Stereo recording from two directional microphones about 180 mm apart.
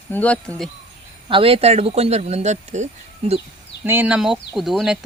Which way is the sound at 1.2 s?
30° right (ahead or behind).